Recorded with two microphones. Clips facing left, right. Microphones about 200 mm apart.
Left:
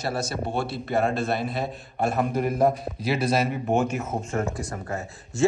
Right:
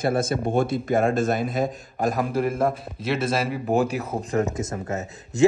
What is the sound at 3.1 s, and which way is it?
Speech, centre (ahead or behind).